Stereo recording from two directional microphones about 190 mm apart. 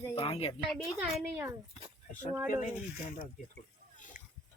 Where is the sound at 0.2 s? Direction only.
30° left (ahead or behind).